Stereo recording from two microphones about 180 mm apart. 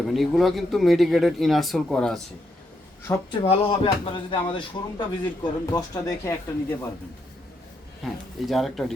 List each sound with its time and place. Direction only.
0.1 s a man's voice: centre (ahead or behind)
3.1 s speech: 15° left (ahead or behind)
3.7 s speech: 30° left (ahead or behind)
8.0 s a man's voice: centre (ahead or behind)